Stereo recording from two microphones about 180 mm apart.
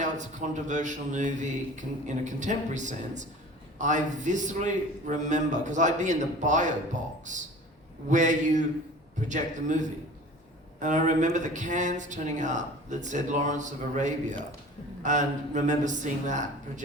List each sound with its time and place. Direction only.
0.0 s speech: 40° right (ahead or behind)